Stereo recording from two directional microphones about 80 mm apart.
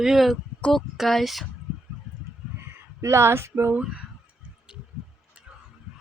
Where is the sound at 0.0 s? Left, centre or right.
Centre.